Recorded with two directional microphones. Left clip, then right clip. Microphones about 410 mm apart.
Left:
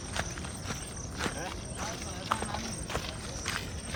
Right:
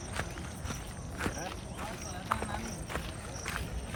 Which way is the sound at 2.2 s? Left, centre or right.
Centre.